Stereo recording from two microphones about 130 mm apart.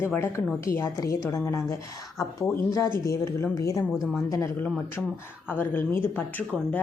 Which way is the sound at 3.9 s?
5° right (ahead or behind).